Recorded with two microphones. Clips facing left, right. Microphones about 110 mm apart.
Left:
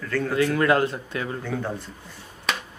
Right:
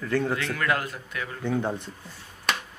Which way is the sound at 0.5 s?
30° left (ahead or behind).